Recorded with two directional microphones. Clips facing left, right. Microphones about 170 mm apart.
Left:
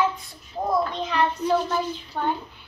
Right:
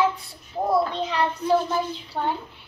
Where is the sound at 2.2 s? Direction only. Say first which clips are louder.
Even; 15° right (ahead or behind).